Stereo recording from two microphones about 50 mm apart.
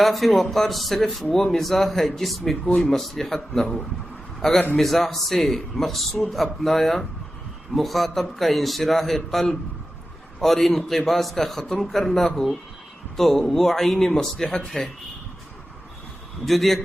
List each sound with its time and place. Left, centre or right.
0.0 s a man's voice: centre
16.5 s a man's voice: centre